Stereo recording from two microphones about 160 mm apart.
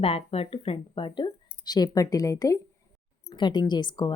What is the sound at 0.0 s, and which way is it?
A woman's voice, 40° left (ahead or behind).